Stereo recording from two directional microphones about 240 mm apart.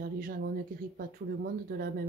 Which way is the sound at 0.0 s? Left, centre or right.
Right.